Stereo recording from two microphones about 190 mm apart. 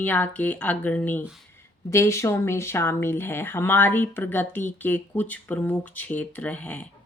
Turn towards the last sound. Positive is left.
turn(degrees=10)  # may be behind; listen again after turning